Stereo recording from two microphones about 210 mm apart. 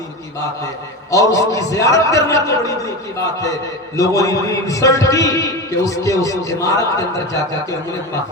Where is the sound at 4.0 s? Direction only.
15° left (ahead or behind).